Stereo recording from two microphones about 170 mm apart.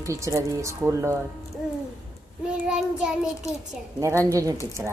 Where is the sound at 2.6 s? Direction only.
5° right (ahead or behind).